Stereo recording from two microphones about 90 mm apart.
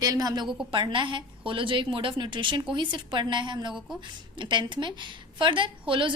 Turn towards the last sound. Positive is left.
turn(degrees=-70)  # may be behind; listen again after turning